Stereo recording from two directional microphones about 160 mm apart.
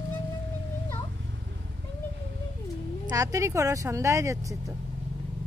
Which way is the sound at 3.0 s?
20° right (ahead or behind).